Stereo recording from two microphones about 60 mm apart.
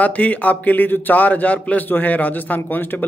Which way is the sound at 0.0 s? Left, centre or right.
Left.